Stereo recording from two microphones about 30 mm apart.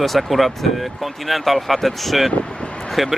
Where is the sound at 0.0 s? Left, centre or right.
Centre.